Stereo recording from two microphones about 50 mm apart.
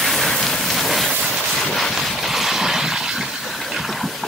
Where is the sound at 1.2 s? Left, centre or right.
Centre.